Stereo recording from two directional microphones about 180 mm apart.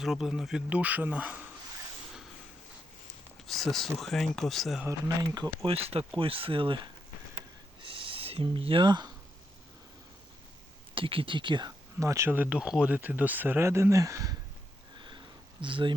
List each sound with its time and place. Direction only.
0.0 s speech: centre (ahead or behind)
3.4 s speech: centre (ahead or behind)
4.9 s speech: 20° right (ahead or behind)
7.3 s a sound: 30° right (ahead or behind)
10.9 s speech: 30° right (ahead or behind)
14.9 s sniff: 25° right (ahead or behind)
15.6 s speech: 25° right (ahead or behind)